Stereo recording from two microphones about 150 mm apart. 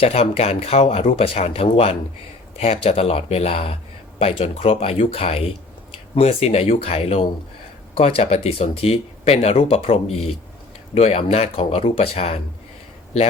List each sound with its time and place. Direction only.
0.0 s speech: 40° left (ahead or behind)